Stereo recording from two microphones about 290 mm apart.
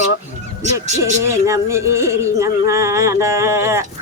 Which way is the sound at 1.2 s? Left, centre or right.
Centre.